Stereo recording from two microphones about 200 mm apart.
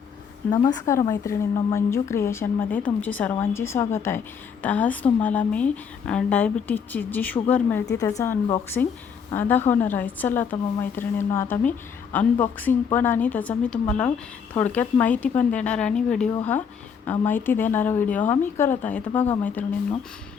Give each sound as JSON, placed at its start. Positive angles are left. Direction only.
{"t": 0.5, "sound": "a woman's voice", "side_deg": 20}